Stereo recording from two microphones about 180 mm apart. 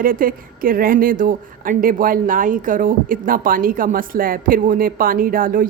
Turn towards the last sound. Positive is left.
turn(degrees=-50)  # may be behind; listen again after turning